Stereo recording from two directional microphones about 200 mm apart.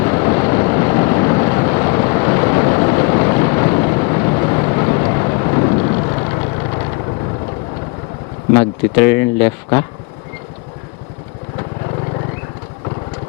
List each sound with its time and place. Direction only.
0.0 s vehicle: 20° left (ahead or behind)
8.5 s speech: 15° left (ahead or behind)